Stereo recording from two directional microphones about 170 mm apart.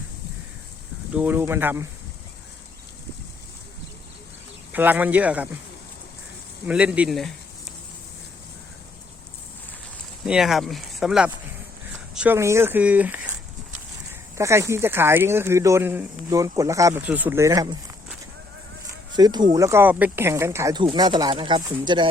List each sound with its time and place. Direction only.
1.1 s speech: 10° right (ahead or behind)
4.7 s speech: 10° right (ahead or behind)
6.7 s speech: 5° right (ahead or behind)
10.2 s speech: 5° right (ahead or behind); by 17.7 s 20° right (ahead or behind)
19.1 s speech: 25° right (ahead or behind)
20.8 s speech: 30° right (ahead or behind)